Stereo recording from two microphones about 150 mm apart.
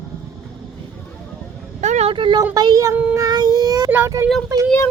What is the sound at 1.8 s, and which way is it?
Vehicle, 50° right (ahead or behind).